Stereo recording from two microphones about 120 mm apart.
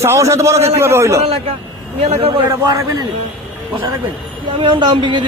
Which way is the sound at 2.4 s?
30° right (ahead or behind).